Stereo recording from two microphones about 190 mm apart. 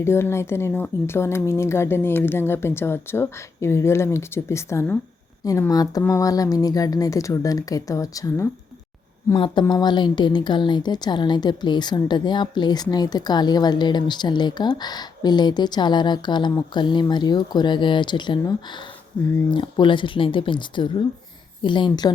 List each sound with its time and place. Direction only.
0.0 s a woman's voice: 15° left (ahead or behind)